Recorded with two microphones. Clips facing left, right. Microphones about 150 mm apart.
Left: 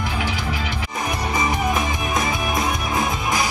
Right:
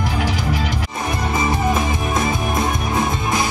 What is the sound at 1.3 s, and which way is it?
Music, 25° right (ahead or behind).